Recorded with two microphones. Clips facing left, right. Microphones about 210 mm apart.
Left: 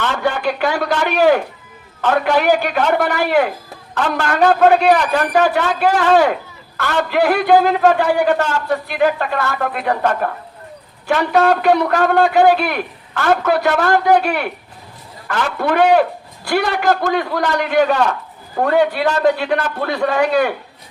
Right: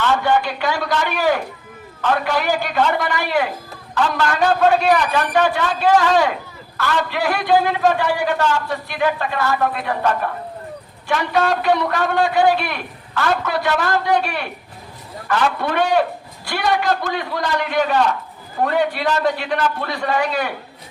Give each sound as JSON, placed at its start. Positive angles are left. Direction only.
{"t": 0.6, "sound": "a man's voice", "side_deg": 50}
{"t": 5.1, "sound": "a man's voice", "side_deg": 40}
{"t": 5.5, "sound": "a man's voice", "side_deg": 55}
{"t": 11.1, "sound": "a man's voice", "side_deg": 55}